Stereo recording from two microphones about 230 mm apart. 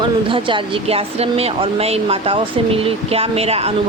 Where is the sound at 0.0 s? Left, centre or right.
Right.